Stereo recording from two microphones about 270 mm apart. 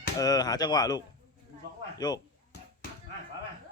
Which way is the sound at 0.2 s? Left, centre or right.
Centre.